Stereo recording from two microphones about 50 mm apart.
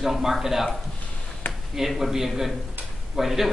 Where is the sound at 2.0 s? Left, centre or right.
Centre.